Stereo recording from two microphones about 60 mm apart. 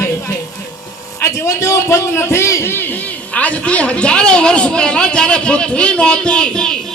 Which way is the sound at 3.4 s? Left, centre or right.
Left.